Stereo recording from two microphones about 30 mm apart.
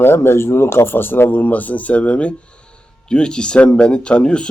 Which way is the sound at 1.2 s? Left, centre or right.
Left.